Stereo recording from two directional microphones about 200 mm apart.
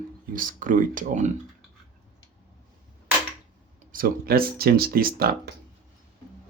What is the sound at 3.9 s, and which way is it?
Speech, 45° right (ahead or behind).